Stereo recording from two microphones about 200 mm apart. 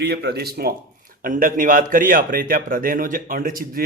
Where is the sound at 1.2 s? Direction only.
45° right (ahead or behind).